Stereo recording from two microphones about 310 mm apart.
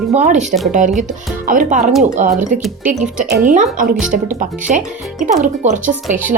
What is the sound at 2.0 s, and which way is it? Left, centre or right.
Speech, right.